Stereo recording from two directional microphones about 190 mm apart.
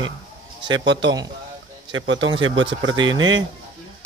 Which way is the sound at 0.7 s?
70° right (ahead or behind).